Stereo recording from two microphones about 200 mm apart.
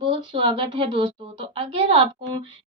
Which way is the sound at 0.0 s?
25° right (ahead or behind).